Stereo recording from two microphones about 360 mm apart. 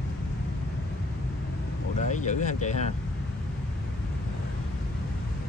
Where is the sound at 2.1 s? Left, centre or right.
Centre.